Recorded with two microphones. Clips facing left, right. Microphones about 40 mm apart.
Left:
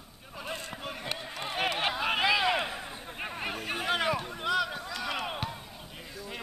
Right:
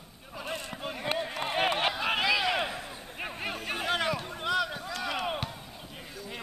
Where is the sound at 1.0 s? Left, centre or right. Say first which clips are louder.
Right 8 dB; centre.